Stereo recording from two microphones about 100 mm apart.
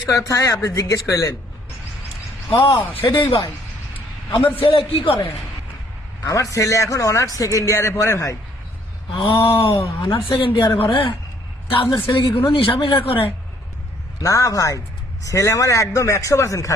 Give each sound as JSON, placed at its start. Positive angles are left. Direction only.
{"t": 0.1, "sound": "a man's voice", "side_deg": 35}
{"t": 2.6, "sound": "a man's voice", "side_deg": 65}
{"t": 6.2, "sound": "a man's voice", "side_deg": 35}
{"t": 9.3, "sound": "a man's voice", "side_deg": 65}
{"t": 11.9, "sound": "speech", "side_deg": 25}
{"t": 12.5, "sound": "a man's voice", "side_deg": 60}
{"t": 14.2, "sound": "a man's voice", "side_deg": 35}